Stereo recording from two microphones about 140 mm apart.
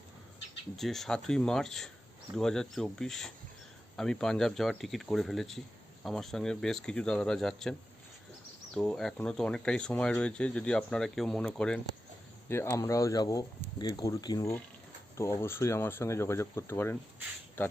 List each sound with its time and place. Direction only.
0.8 s speech: centre (ahead or behind)
12.5 s speech: 20° left (ahead or behind)